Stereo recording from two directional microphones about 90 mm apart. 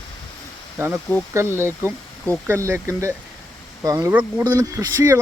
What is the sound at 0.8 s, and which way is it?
Speech, 30° right (ahead or behind).